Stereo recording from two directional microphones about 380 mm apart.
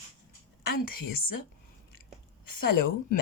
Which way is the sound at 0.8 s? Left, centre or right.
Left.